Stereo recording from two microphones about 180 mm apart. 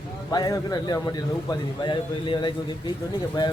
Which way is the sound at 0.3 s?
20° left (ahead or behind).